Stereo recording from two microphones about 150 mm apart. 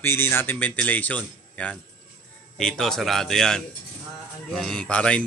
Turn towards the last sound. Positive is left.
turn(degrees=5)  # may be behind; listen again after turning